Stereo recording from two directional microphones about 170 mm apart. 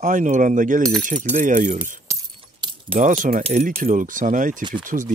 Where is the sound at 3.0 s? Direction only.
50° right (ahead or behind).